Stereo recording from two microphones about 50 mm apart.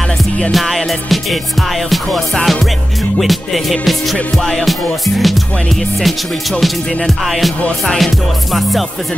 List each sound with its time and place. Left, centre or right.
0.5 s music: centre
7.8 s music: centre